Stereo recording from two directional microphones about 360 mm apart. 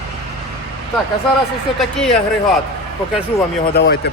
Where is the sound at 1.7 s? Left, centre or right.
Centre.